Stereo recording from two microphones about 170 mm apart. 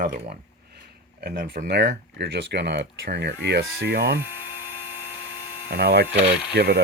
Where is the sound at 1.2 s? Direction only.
65° right (ahead or behind).